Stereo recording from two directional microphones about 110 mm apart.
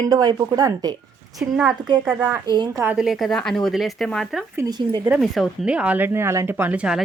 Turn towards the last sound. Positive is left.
turn(degrees=-10)  # may be behind; listen again after turning